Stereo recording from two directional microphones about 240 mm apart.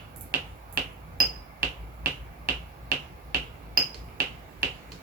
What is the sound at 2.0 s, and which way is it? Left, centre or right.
Finger snapping, right.